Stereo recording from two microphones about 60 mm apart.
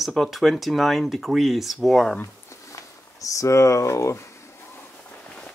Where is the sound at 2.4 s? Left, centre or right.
Left.